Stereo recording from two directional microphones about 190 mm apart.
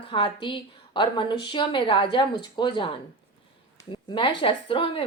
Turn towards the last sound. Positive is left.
turn(degrees=30)  # may be behind; listen again after turning